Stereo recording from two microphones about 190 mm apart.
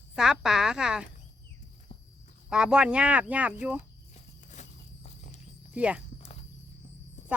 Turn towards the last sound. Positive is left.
turn(degrees=-5)  # may be behind; listen again after turning